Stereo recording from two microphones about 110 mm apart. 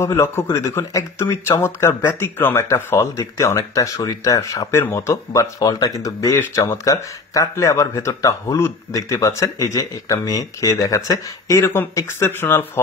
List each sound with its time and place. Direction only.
0.0 s speech: 25° left (ahead or behind)